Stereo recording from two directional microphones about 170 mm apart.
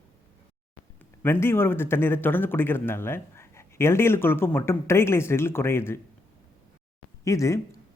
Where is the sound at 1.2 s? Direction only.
15° left (ahead or behind).